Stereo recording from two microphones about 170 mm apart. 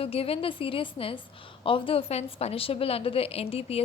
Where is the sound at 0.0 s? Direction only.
35° left (ahead or behind).